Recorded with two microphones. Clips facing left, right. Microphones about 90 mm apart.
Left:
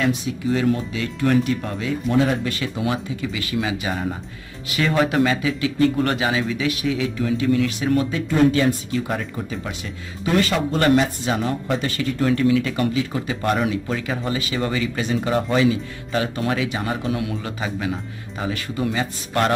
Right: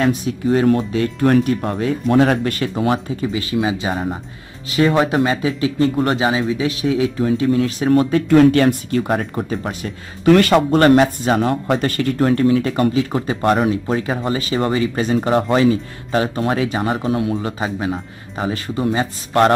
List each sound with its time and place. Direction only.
0.0 s speech: 45° right (ahead or behind)
2.7 s speech: 40° right (ahead or behind)
8.3 s speech: 65° right (ahead or behind); by 9.8 s 45° right (ahead or behind)
10.2 s speech: 60° right (ahead or behind); by 19.5 s 35° right (ahead or behind)